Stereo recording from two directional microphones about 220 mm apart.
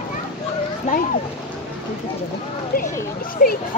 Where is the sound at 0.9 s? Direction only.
35° left (ahead or behind).